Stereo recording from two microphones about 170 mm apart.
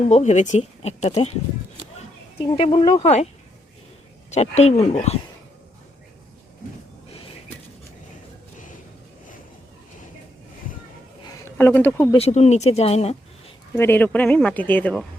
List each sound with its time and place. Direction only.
0.1 s speech: 45° left (ahead or behind)
2.4 s speech: 35° left (ahead or behind)
4.3 s speech: 40° left (ahead or behind)
11.4 s speech: 10° left (ahead or behind)
12.1 s speech: 40° left (ahead or behind)
13.7 s speech: 10° left (ahead or behind)